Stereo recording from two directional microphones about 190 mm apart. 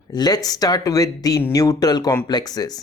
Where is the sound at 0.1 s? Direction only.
20° left (ahead or behind).